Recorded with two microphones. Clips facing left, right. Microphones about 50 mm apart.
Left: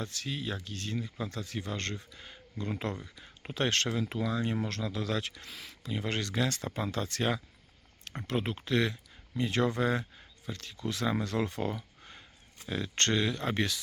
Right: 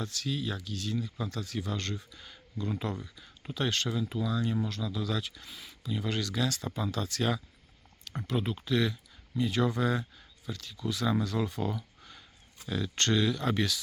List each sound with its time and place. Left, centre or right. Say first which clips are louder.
0.0 s speech: right 2 dB; left
1.2 s speech: right 1 dB; left
2.1 s speech: right 1 dB; left
3.5 s speech: left 1 dB; left
3.9 s speech: even; left
5.2 s speech: left 2 dB; left
6.1 s speech: even; left
8.0 s speech: right 1 dB; left
8.4 s speech: even; left
11.0 s speech: right 2 dB; left
11.3 s speech: even; left
12.0 s a sound: left 1 dB; left
13.0 s speech: right 1 dB; left